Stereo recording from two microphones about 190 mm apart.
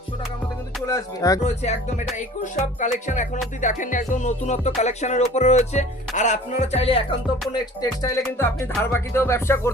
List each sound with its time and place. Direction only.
0.9 s music: 15° left (ahead or behind)
1.5 s music: 40° left (ahead or behind)
7.6 s music: 20° left (ahead or behind)